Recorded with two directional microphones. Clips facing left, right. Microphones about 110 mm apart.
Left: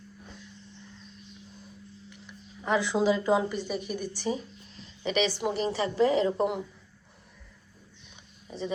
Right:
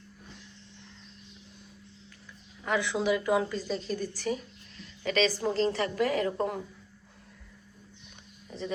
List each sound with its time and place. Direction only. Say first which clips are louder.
2.6 s a woman's voice: left 3 dB; 25° left (ahead or behind)
8.4 s speech: left 2 dB; 20° left (ahead or behind)